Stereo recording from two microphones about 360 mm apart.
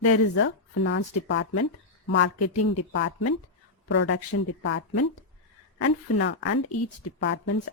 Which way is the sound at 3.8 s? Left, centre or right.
Left.